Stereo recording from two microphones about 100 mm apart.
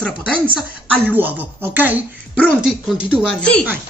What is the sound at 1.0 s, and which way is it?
Speech, 20° right (ahead or behind).